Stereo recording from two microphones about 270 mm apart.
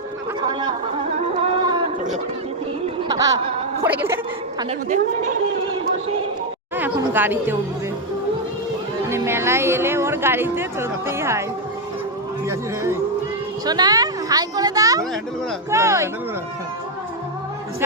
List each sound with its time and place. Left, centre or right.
1.4 s a sound: centre
3.1 s speech: centre
6.7 s speech: centre
9.0 s speech: centre
12.5 s speech: centre